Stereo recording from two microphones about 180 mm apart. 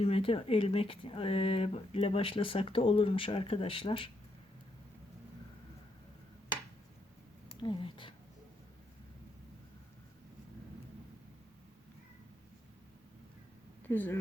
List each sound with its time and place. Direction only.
0.0 s speech: 30° left (ahead or behind)
7.5 s speech: 25° left (ahead or behind)
13.8 s speech: 10° left (ahead or behind)